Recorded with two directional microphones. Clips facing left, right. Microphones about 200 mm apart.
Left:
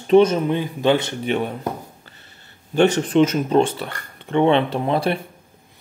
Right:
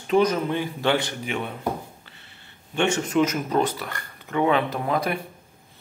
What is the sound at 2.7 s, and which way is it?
Speech, 35° left (ahead or behind).